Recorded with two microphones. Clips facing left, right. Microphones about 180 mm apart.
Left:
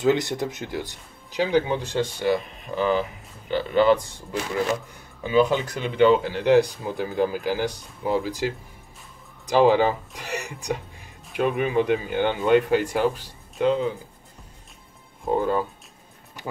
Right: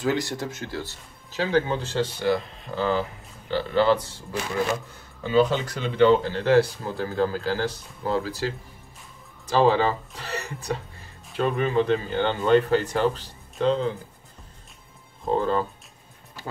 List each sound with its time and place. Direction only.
0.0 s speech: 20° left (ahead or behind)
15.2 s speech: 10° left (ahead or behind)